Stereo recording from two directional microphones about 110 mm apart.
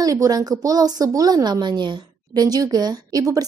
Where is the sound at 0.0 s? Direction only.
35° right (ahead or behind).